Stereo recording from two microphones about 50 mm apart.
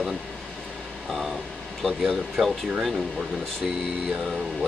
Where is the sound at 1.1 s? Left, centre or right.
Centre.